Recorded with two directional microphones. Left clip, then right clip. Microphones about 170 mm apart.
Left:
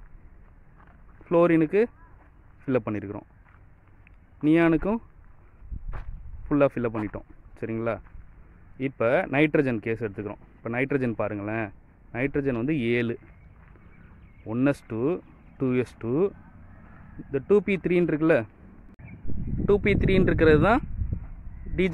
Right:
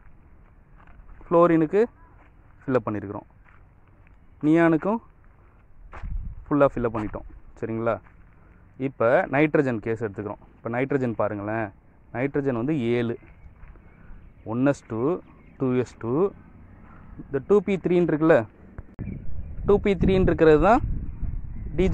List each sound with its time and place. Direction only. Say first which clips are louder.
1.2 s speech: right 2 dB; 5° left (ahead or behind)
4.5 s speech: right 2 dB; centre (ahead or behind)
5.9 s walk: right 3 dB; 20° right (ahead or behind)
6.5 s speech: right 2 dB; centre (ahead or behind)
14.5 s speech: right 2 dB; centre (ahead or behind)